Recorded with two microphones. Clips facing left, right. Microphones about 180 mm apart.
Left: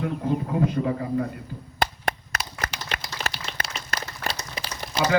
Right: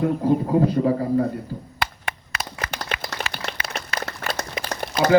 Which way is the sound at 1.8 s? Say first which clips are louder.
Left 5 dB; 45° left (ahead or behind).